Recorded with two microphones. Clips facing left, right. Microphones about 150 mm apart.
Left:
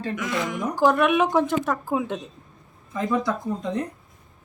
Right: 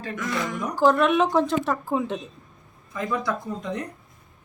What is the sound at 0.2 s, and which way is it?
Speech, centre (ahead or behind).